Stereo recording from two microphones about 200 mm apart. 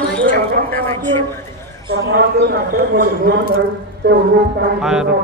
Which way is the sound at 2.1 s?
50° right (ahead or behind).